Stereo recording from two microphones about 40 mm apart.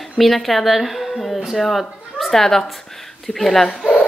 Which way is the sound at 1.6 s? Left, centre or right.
Centre.